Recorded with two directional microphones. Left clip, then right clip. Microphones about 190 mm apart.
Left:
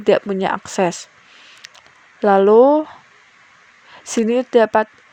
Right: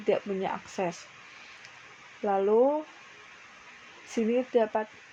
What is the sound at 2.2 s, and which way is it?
Speech, 60° left (ahead or behind).